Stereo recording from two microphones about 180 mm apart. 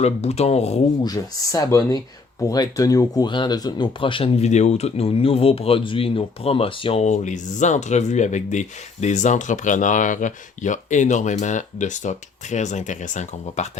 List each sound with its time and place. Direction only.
0.0 s speech: 35° left (ahead or behind)
1.0 s speech: 20° left (ahead or behind); by 13.7 s 40° left (ahead or behind)